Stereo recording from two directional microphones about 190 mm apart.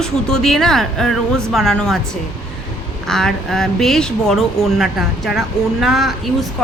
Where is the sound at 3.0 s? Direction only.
Centre (ahead or behind).